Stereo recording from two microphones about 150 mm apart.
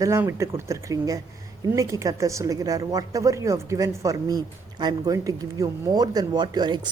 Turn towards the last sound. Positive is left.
turn(degrees=-30)  # may be behind; listen again after turning